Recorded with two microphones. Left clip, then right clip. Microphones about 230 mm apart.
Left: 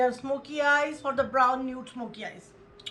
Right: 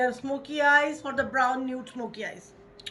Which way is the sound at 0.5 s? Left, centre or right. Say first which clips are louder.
Right 3 dB; left.